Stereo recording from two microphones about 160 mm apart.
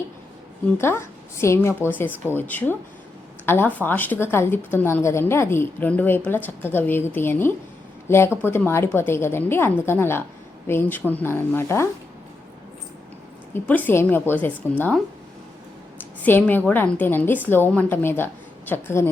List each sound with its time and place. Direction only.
0.8 s speech: 15° left (ahead or behind)
13.5 s speech: 10° left (ahead or behind)
16.2 s speech: 10° left (ahead or behind)